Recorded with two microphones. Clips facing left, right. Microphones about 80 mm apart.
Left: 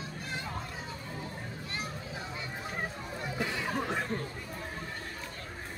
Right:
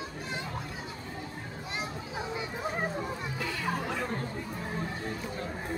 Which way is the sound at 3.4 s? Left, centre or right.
Left.